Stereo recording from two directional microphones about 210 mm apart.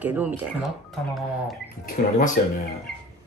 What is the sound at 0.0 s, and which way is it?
Speech, 10° right (ahead or behind).